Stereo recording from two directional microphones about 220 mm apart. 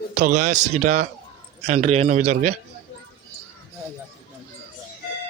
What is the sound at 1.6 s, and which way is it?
Speech, 30° right (ahead or behind).